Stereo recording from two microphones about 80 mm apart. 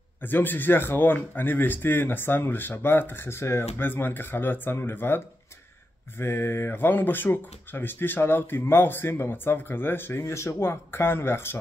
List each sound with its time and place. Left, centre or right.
0.2 s speech: left